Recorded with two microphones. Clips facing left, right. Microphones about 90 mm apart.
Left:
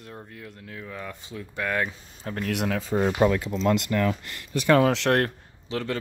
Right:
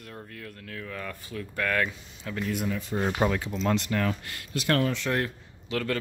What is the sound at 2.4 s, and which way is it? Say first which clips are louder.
Speech: left 4 dB; 75° left (ahead or behind).